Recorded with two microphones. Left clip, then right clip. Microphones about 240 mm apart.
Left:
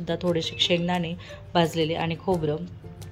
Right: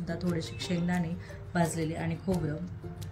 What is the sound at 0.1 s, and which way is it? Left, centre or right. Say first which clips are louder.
Speech: left 10 dB; centre.